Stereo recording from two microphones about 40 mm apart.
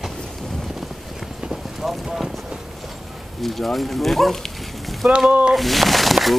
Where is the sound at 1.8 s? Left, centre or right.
Centre.